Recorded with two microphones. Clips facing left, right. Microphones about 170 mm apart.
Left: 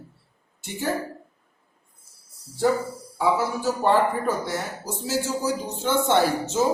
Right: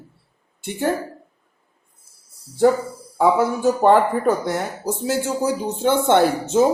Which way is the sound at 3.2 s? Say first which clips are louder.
Right 6 dB; 55° right (ahead or behind).